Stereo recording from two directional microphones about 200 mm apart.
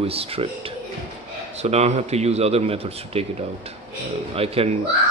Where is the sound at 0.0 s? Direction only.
30° right (ahead or behind).